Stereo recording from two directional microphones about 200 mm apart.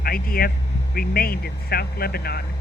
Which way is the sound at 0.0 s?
50° left (ahead or behind).